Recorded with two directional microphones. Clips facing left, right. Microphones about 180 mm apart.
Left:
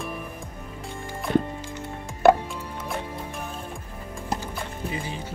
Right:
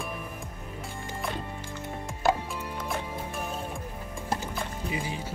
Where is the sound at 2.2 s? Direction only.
65° left (ahead or behind).